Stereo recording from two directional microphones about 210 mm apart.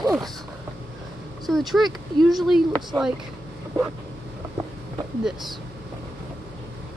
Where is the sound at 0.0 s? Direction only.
Centre (ahead or behind).